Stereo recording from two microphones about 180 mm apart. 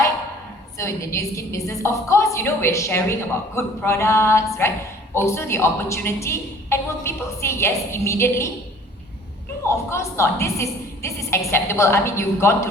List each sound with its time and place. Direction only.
0.8 s a woman's voice: 15° left (ahead or behind)
9.6 s a woman's voice: 15° left (ahead or behind)